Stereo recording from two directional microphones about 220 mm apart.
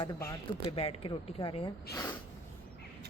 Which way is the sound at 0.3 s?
25° left (ahead or behind).